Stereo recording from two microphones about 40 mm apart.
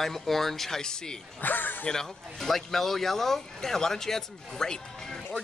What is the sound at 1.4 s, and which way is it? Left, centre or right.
Speech, left.